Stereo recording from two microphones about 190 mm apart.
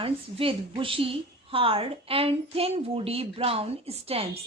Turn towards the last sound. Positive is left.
turn(degrees=-30)  # may be behind; listen again after turning